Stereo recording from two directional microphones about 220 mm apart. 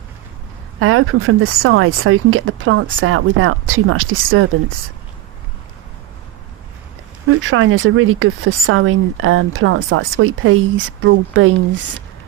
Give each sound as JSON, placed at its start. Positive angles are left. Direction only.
{"t": 0.8, "sound": "speech", "side_deg": -75}
{"t": 7.3, "sound": "speech", "side_deg": -70}